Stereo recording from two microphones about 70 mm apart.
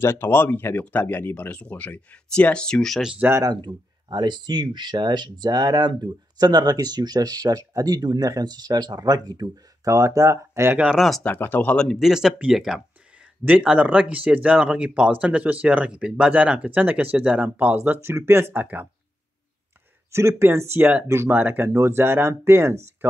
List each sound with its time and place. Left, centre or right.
0.0 s speech: left; by 3.0 s centre
3.4 s speech: right
10.9 s speech: centre
11.2 s speech: left
11.7 s speech: centre
12.0 s speech: centre
13.5 s speech: centre
20.1 s speech: right
21.6 s speech: right